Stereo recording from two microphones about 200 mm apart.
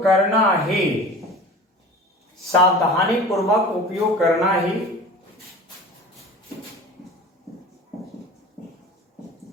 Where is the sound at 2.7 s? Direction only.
Centre (ahead or behind).